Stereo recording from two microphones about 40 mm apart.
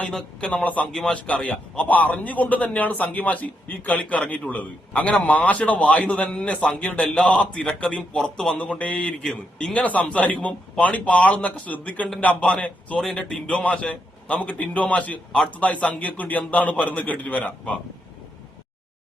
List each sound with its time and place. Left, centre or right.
0.3 s speech: left
0.6 s a man's voice: left
1.1 s a man's voice: left
1.9 s a man's voice: left
6.7 s a man's voice: left; by 8.5 s centre
8.5 s a man's voice: left
9.2 s a man's voice: centre
9.7 s a man's voice: left